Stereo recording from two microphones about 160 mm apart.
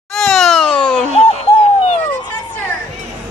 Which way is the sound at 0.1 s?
Centre (ahead or behind).